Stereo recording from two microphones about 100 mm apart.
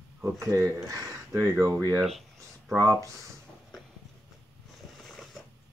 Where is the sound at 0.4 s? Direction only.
30° right (ahead or behind).